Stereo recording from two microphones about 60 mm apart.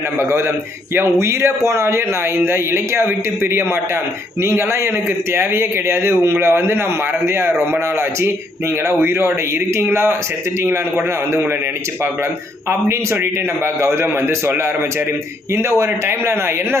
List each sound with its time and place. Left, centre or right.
0.2 s a man's voice: right
13.8 s a man's voice: right
15.5 s a man's voice: right